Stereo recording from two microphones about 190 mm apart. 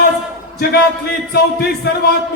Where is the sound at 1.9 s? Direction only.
55° left (ahead or behind).